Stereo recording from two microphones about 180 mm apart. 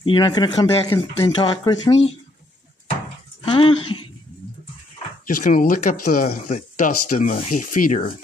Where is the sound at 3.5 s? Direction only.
30° left (ahead or behind).